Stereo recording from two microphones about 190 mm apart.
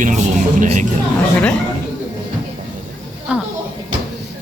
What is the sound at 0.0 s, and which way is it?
Music, 40° right (ahead or behind).